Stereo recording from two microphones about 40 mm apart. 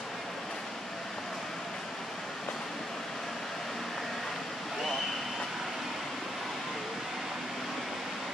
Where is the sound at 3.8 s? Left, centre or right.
Centre.